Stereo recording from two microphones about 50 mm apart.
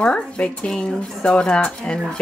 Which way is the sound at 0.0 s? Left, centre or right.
Centre.